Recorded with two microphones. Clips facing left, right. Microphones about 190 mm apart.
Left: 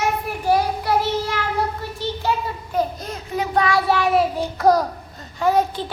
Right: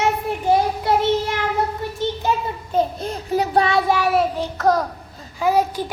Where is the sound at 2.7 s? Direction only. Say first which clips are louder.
Right 3 dB; 25° right (ahead or behind).